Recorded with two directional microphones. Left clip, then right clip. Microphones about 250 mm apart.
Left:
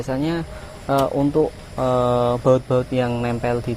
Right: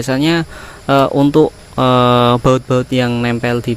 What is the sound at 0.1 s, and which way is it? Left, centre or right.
Speech, right.